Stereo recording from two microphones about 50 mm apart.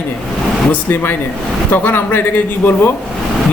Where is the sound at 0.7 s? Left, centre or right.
Left.